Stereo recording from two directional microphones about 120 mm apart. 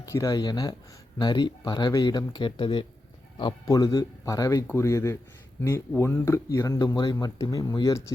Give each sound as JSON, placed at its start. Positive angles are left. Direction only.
{"t": 0.0, "sound": "speech", "side_deg": 25}